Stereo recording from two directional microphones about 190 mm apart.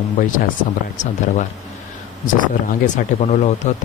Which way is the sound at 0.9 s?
40° left (ahead or behind).